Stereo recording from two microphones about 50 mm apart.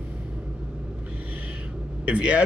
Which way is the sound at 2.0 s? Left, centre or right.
Right.